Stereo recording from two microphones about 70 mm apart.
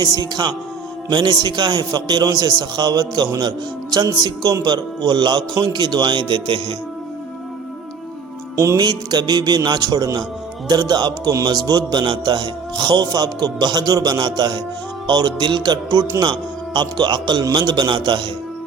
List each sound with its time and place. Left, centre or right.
0.0 s music: right
1.1 s a man's voice: right
8.5 s music: right
8.8 s a man's voice: right
9.6 s music: right
10.7 s a man's voice: right
11.4 s music: right
12.8 s a man's voice: right
16.2 s a man's voice: right